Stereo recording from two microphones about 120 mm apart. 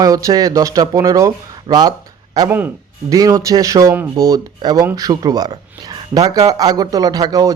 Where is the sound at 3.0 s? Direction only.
30° right (ahead or behind).